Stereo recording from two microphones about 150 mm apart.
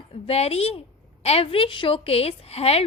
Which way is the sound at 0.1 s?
40° left (ahead or behind).